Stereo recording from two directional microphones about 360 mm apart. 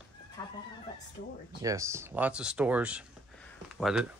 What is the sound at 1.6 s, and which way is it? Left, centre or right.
Speech, centre.